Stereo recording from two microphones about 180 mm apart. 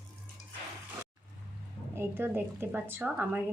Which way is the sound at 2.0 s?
10° right (ahead or behind).